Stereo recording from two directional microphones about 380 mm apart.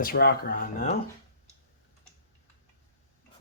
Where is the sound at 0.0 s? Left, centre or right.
Left.